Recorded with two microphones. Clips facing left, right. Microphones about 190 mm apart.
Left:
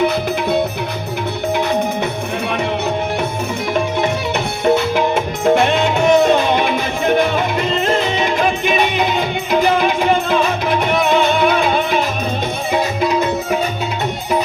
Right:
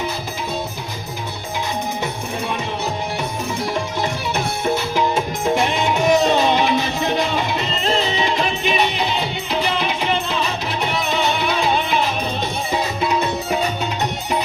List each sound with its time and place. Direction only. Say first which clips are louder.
4.6 s music: left 7 dB; 60° left (ahead or behind)